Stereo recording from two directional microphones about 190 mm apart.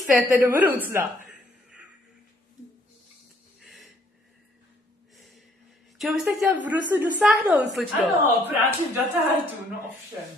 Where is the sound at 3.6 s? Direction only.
Centre (ahead or behind).